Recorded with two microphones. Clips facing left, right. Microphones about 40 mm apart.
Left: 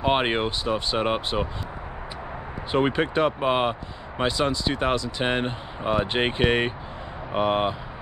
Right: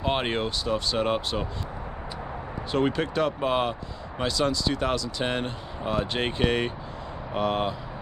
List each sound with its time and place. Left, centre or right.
0.0 s speech: left
2.7 s speech: left